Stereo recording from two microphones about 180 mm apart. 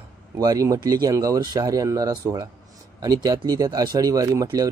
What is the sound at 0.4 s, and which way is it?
Speech, 20° right (ahead or behind).